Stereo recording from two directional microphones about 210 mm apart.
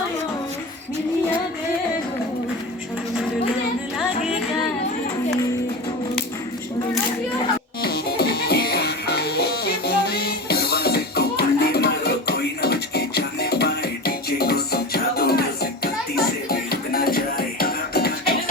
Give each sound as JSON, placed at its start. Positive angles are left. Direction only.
{"t": 7.8, "sound": "music", "side_deg": 50}